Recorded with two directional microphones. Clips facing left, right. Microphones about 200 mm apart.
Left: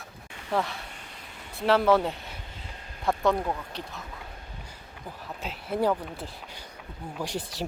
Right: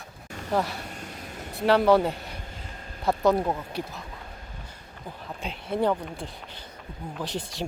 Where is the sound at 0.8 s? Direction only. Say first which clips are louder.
Right 7 dB; 45° right (ahead or behind).